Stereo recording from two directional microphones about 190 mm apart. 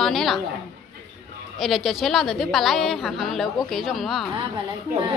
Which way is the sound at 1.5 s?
Centre (ahead or behind).